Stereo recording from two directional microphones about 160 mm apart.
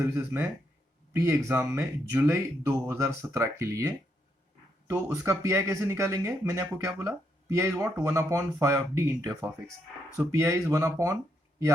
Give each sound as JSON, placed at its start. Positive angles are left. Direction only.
{"t": 0.0, "sound": "speech", "side_deg": -10}